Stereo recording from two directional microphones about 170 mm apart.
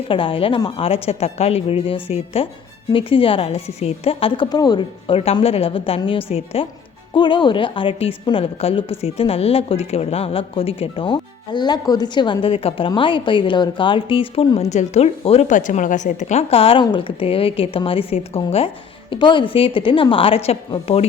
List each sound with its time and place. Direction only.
0.1 s a woman's voice: 30° left (ahead or behind)